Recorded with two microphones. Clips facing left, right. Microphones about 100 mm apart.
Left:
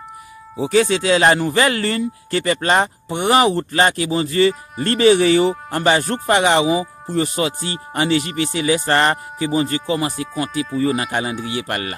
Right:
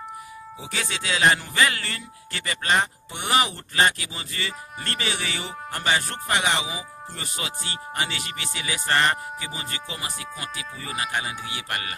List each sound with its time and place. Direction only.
0.6 s speech: 45° left (ahead or behind)